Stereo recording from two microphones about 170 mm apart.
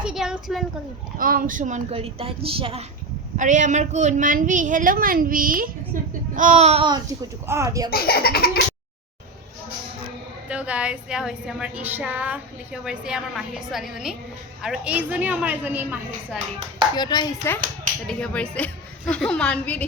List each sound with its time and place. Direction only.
0.0 s a sound: 5° right (ahead or behind)
1.2 s speech: 55° right (ahead or behind); by 2.8 s 35° right (ahead or behind)
3.3 s a woman's voice: 45° right (ahead or behind)
7.4 s a woman's voice: 15° right (ahead or behind)
7.9 s belly laugh: 65° left (ahead or behind)
10.5 s a woman's voice: 5° right (ahead or behind)
16.9 s speech: 25° left (ahead or behind)
18.1 s a woman's voice: 5° left (ahead or behind)